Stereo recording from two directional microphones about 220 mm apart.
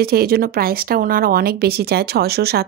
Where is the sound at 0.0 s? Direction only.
45° right (ahead or behind).